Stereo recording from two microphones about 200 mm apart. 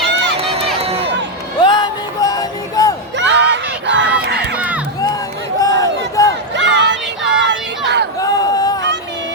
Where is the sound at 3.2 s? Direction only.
60° right (ahead or behind).